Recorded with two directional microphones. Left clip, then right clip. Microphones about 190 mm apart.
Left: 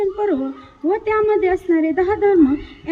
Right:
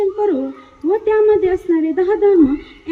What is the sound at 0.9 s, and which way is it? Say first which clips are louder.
Speech: right 4 dB; 15° left (ahead or behind).